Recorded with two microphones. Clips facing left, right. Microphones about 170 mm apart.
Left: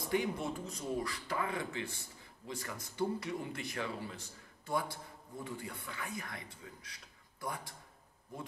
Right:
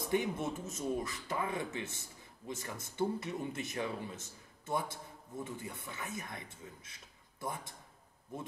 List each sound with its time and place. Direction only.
0.1 s a man's voice: 20° right (ahead or behind)